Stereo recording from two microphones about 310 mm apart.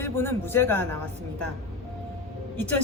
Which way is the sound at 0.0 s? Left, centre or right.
Centre.